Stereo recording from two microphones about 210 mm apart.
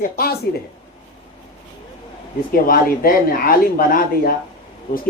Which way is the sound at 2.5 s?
40° left (ahead or behind).